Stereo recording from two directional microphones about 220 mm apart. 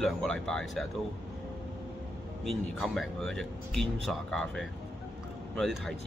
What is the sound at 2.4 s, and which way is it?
Speech, centre (ahead or behind).